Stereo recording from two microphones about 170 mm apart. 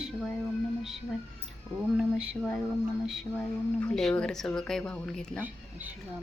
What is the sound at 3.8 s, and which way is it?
Speech, 5° left (ahead or behind).